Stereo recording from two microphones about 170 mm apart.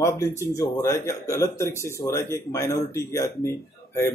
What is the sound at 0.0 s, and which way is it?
Speech, 15° left (ahead or behind).